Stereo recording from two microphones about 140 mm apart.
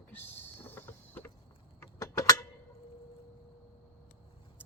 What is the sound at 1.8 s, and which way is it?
Mechanisms, 25° left (ahead or behind).